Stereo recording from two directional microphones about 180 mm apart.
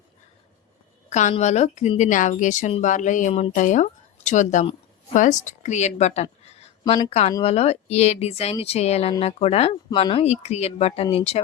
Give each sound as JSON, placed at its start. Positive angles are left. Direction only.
{"t": 1.1, "sound": "speech", "side_deg": 40}
{"t": 6.4, "sound": "a sound", "side_deg": 35}
{"t": 7.4, "sound": "speech", "side_deg": 35}